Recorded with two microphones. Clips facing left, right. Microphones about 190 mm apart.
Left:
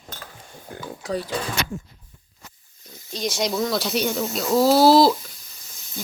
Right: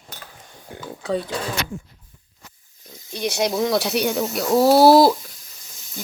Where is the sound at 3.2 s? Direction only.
60° right (ahead or behind).